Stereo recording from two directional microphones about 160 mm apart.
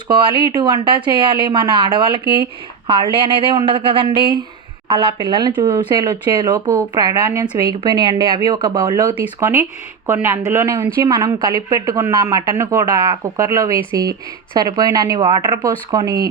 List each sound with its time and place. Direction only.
0.1 s a man's voice: 30° right (ahead or behind)
7.3 s speech: 10° right (ahead or behind)
7.7 s a man's voice: 25° right (ahead or behind)